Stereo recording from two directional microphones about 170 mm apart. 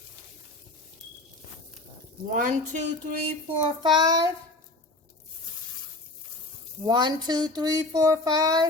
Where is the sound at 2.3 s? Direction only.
50° right (ahead or behind).